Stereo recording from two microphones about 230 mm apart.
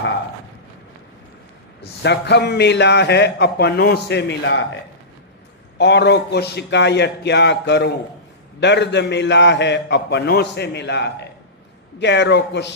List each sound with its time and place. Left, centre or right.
1.8 s a man's voice: left
5.7 s a man's voice: left